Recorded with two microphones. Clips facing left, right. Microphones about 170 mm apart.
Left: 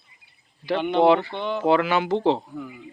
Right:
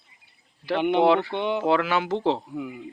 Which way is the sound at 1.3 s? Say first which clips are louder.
Right 2 dB; 20° right (ahead or behind).